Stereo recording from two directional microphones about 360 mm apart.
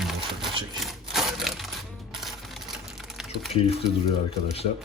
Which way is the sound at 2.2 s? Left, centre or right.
Centre.